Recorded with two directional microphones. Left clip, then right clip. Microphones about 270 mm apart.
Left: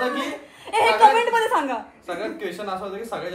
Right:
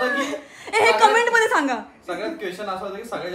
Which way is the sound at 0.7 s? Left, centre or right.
Right.